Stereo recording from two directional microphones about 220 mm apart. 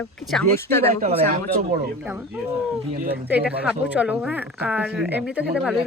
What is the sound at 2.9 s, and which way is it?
Speech, 45° right (ahead or behind).